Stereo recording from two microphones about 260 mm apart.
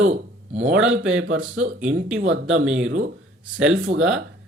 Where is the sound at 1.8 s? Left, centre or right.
Centre.